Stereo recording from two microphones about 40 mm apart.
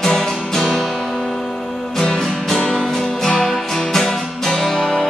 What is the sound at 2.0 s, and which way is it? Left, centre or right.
Music, centre.